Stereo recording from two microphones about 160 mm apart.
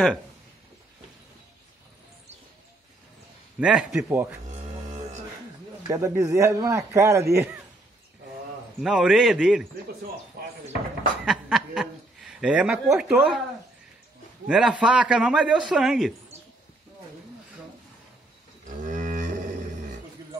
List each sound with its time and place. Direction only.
3.5 s a man's voice: 5° right (ahead or behind)
5.9 s a man's voice: 20° right (ahead or behind)
8.8 s a man's voice: 5° right (ahead or behind)
10.4 s speech: 70° right (ahead or behind)
11.2 s a woman's voice: centre (ahead or behind)
14.5 s a man's voice: 5° right (ahead or behind)
18.9 s cattle: 55° right (ahead or behind)